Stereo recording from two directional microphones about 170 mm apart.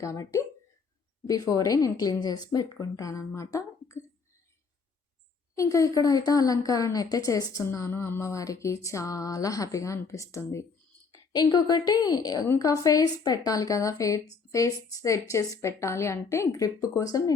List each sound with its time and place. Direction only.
0.0 s a woman's voice: 20° left (ahead or behind)
5.5 s a woman's voice: 20° left (ahead or behind)